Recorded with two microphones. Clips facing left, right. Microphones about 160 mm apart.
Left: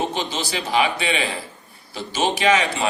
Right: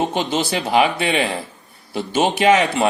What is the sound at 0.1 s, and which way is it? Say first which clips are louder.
Speech: right 5 dB; 55° right (ahead or behind).